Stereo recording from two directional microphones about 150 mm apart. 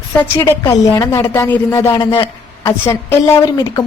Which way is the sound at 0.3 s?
20° left (ahead or behind).